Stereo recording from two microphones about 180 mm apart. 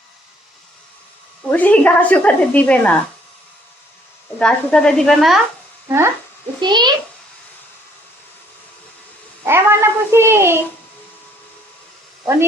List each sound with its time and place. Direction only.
1.5 s a woman's voice: 10° left (ahead or behind)
4.4 s a woman's voice: 5° left (ahead or behind)
6.6 s a child's voice: 25° right (ahead or behind)
9.4 s a child's voice: 15° right (ahead or behind)
12.2 s speech: 15° right (ahead or behind)